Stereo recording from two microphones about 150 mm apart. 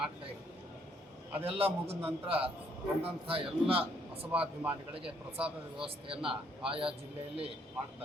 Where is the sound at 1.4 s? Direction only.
40° right (ahead or behind).